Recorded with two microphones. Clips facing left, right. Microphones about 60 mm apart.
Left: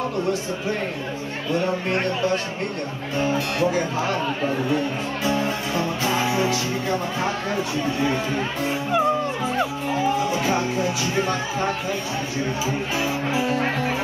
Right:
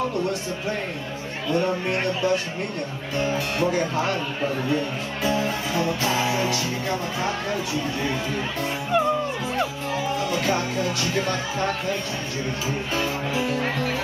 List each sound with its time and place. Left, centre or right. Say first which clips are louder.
1.5 s music: even; centre
5.2 s music: even; centre
8.9 s music: even; centre
10.2 s speech: left 2 dB; centre
12.9 s speech: left 1 dB; centre